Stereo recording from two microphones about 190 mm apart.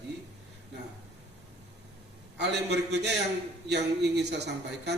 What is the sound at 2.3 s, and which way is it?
Speech, 65° right (ahead or behind).